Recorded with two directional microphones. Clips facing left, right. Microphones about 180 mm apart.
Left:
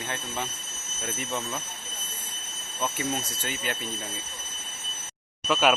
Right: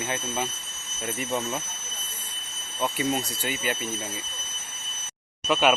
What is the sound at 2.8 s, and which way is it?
Speech, 15° right (ahead or behind).